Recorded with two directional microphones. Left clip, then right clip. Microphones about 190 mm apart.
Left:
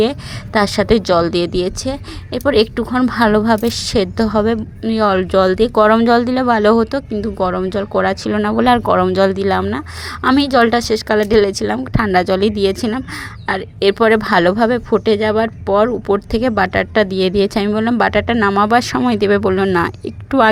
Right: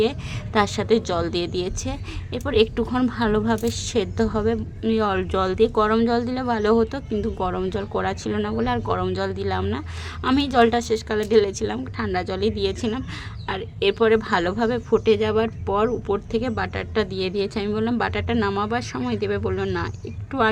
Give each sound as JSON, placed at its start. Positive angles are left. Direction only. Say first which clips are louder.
{"t": 0.0, "sound": "speech", "louder": "left 6 dB", "side_deg": 25}
{"t": 3.1, "sound": "speech", "louder": "left 9 dB", "side_deg": 35}